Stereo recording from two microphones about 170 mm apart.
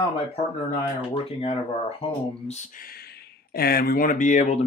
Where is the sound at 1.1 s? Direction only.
35° left (ahead or behind).